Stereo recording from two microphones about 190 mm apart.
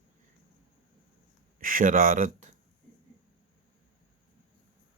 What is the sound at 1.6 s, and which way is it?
Speech, 45° right (ahead or behind).